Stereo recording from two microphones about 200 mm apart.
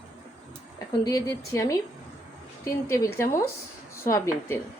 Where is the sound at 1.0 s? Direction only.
15° left (ahead or behind).